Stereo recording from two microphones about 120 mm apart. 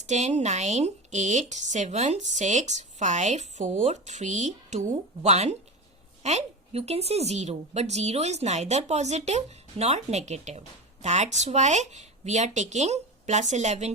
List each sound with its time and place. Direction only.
0.0 s a woman's voice: 75° right (ahead or behind)